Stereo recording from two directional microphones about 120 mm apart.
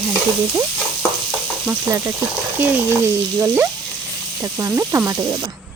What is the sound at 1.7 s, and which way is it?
Speech, 25° right (ahead or behind).